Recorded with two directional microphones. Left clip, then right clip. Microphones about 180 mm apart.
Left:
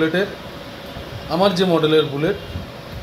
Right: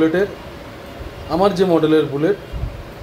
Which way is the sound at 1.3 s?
10° right (ahead or behind).